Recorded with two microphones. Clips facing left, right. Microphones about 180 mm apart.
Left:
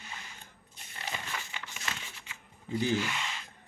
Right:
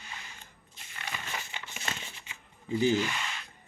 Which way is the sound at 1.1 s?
25° left (ahead or behind).